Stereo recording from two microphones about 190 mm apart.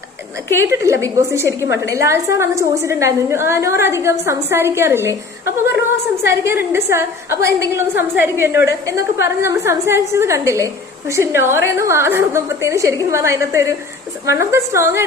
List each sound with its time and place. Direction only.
0.6 s a woman's voice: 15° right (ahead or behind)